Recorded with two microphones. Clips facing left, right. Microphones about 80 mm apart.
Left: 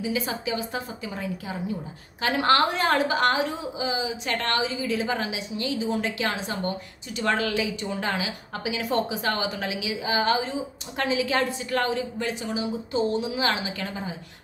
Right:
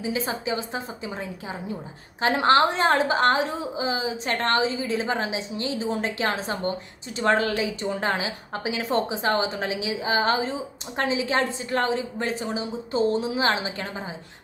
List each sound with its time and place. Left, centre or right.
0.0 s a woman's voice: right